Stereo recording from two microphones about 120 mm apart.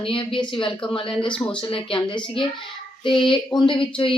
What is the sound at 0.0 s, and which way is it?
Speech, 45° left (ahead or behind).